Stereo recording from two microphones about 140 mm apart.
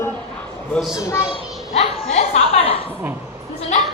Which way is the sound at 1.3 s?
50° left (ahead or behind).